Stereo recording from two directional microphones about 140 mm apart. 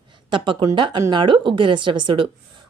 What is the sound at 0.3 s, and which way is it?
Speech, 35° right (ahead or behind).